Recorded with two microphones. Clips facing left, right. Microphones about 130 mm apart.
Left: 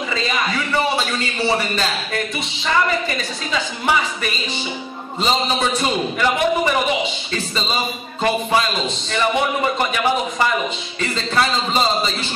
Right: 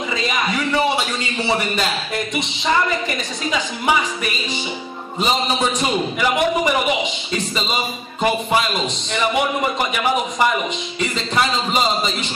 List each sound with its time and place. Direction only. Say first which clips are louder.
5.2 s a man's voice: even; 15° right (ahead or behind)
8.5 s a man's voice: even; 20° right (ahead or behind)
11.0 s a man's voice: left 1 dB; 15° right (ahead or behind)